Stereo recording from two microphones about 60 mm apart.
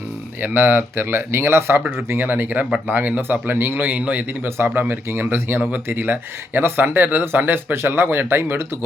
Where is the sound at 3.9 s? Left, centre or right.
Right.